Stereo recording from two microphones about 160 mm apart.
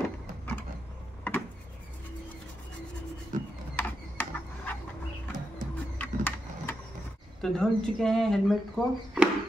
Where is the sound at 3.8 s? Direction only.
10° left (ahead or behind).